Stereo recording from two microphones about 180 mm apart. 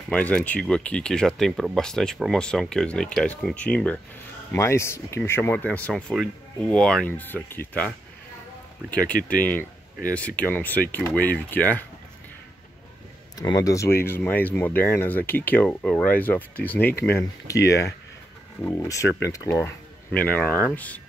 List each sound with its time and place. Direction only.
0.1 s speech: 5° left (ahead or behind)
8.9 s speech: 5° left (ahead or behind)
13.4 s speech: 20° left (ahead or behind)
16.9 s speech: 65° left (ahead or behind)
17.6 s speech: 15° left (ahead or behind)
19.0 s speech: 85° left
19.3 s speech: 15° left (ahead or behind)